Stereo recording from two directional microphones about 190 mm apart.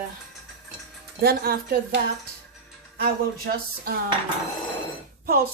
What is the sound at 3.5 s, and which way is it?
Speech, 55° right (ahead or behind).